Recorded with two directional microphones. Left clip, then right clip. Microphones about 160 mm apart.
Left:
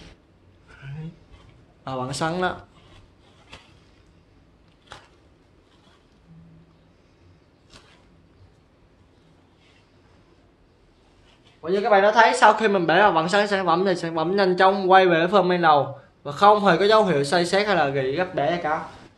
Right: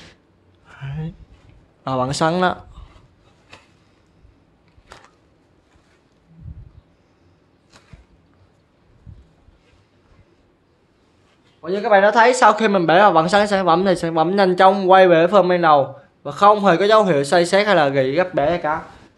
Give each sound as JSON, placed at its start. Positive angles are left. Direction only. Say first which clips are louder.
{"t": 0.7, "sound": "a sound", "louder": "right 7 dB", "side_deg": -80}
{"t": 1.9, "sound": "speech", "louder": "right 8 dB", "side_deg": -80}
{"t": 11.6, "sound": "speech", "louder": "right 3 dB", "side_deg": -65}